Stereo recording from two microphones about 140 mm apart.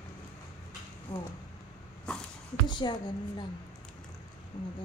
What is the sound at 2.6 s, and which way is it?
Speech, 35° left (ahead or behind).